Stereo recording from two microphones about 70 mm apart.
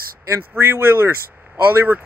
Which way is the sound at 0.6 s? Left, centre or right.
Right.